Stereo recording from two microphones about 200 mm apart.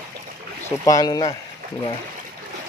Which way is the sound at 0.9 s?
20° left (ahead or behind).